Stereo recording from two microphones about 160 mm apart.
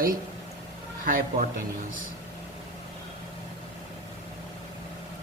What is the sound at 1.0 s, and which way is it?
Speech, 60° right (ahead or behind).